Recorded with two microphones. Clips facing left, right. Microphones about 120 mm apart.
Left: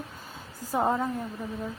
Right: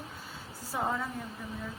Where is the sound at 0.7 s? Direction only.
40° left (ahead or behind).